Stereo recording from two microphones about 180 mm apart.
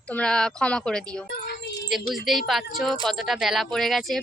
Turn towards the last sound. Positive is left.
turn(degrees=0)  # may be behind; listen again after turning